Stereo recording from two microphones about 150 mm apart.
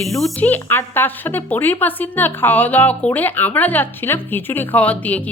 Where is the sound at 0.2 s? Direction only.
10° left (ahead or behind).